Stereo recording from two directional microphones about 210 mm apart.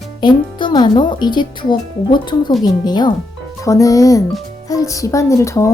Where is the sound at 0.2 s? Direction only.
20° left (ahead or behind).